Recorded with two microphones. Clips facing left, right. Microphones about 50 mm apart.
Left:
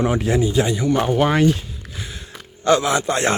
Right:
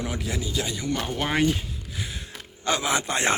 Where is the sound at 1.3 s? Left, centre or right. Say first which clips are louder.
Left 6 dB; centre.